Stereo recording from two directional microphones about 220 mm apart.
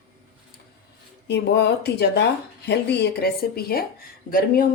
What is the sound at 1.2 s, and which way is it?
Speech, 50° left (ahead or behind).